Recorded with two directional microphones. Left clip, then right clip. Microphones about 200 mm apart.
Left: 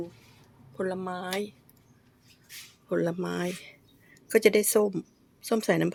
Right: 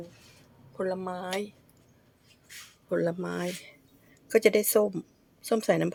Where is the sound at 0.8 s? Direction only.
15° left (ahead or behind).